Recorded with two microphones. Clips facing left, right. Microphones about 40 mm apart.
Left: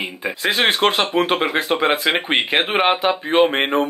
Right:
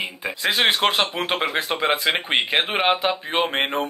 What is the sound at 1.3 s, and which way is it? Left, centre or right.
Speech, centre.